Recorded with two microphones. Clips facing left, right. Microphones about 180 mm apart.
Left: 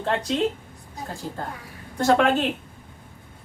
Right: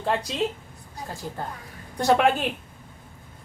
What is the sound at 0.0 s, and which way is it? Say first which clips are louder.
Speech: even; 10° right (ahead or behind).